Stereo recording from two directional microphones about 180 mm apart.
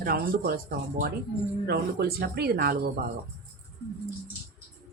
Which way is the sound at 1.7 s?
60° right (ahead or behind).